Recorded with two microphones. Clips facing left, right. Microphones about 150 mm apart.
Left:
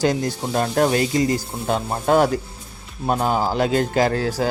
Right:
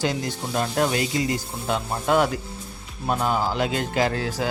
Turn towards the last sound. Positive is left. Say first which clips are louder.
# left 4 dB
turn(degrees=40)  # may be behind; listen again after turning